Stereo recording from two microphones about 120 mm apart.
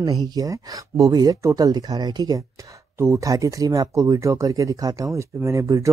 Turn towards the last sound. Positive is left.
turn(degrees=-25)  # may be behind; listen again after turning